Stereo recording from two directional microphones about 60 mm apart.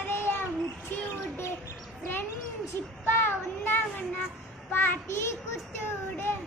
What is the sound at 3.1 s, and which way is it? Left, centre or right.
Child singing, left.